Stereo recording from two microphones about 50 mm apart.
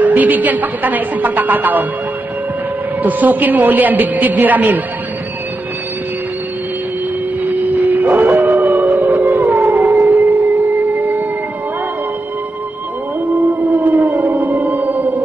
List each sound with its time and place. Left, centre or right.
0.0 s a woman's voice: right
3.0 s a woman's voice: right
7.4 s howl: right
13.4 s music: right